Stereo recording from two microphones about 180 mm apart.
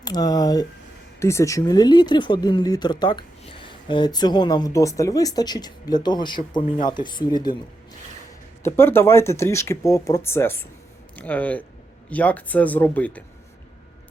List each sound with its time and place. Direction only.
0.0 s speech: 20° left (ahead or behind)
8.6 s speech: 15° left (ahead or behind)